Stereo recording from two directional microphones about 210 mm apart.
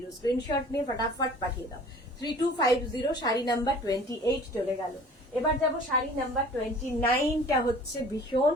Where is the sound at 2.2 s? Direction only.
15° left (ahead or behind).